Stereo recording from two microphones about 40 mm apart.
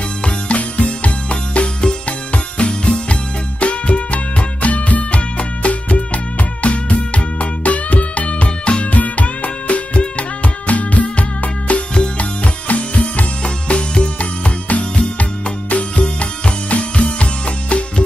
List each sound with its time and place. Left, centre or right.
0.2 s music: left
11.9 s music: left
12.6 s music: left